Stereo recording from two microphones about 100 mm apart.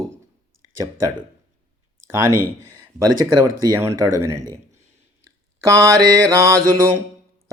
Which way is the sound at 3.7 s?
30° right (ahead or behind).